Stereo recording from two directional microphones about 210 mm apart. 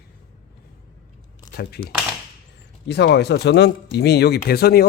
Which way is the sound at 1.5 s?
50° left (ahead or behind).